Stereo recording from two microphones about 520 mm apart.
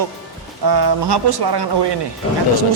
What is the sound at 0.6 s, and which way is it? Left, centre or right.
A man's voice, right.